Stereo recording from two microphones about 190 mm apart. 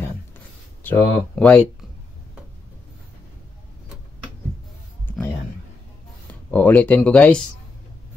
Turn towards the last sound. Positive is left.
turn(degrees=5)  # may be behind; listen again after turning